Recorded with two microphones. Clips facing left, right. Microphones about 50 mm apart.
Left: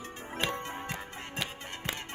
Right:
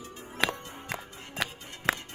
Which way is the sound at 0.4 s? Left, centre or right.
Right.